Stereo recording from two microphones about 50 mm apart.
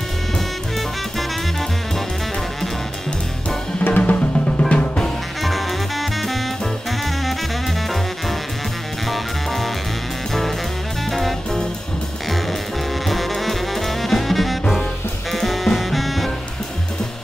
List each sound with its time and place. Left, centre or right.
3.8 s drum: left
4.5 s drum: centre
5.4 s music: centre
9.1 s music: centre
11.1 s music: centre
13.0 s saxophone: centre
15.3 s music: centre